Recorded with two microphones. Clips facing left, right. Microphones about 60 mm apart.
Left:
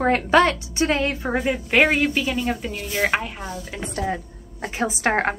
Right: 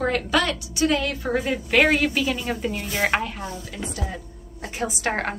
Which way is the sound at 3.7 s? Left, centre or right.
Left.